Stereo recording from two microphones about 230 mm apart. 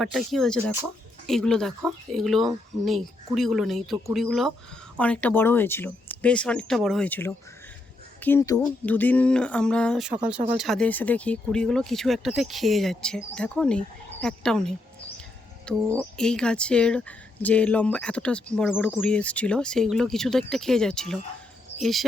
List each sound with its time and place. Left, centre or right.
0.0 s speech: centre
15.9 s speech: centre